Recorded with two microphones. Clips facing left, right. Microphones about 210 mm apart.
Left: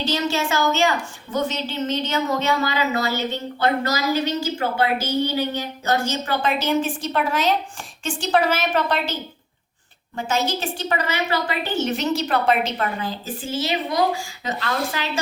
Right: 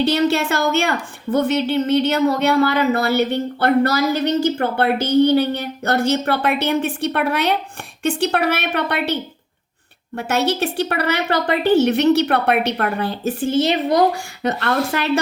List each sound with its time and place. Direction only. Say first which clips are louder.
0.0 s a woman's voice: right 6 dB; 60° right (ahead or behind)
10.2 s a woman's voice: right 4 dB; 65° right (ahead or behind)